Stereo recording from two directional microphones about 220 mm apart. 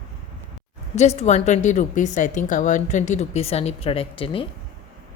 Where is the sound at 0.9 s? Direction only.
30° left (ahead or behind).